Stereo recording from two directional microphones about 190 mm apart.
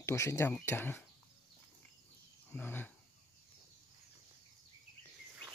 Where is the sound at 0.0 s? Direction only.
15° left (ahead or behind).